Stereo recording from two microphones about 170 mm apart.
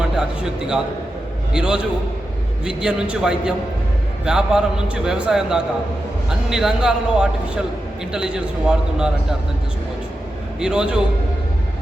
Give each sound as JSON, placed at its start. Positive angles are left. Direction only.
{"t": 0.2, "sound": "speech", "side_deg": -5}
{"t": 10.6, "sound": "speech", "side_deg": -5}